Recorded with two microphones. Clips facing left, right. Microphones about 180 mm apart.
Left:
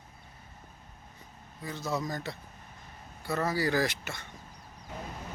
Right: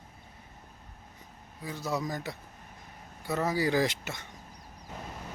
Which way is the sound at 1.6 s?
10° right (ahead or behind).